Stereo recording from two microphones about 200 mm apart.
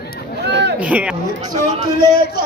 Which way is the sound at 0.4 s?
60° right (ahead or behind).